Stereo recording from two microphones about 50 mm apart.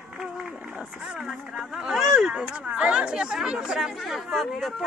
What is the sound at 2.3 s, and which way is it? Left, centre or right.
Speech, centre.